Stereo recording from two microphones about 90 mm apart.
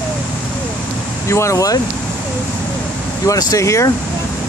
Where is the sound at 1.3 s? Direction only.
35° left (ahead or behind).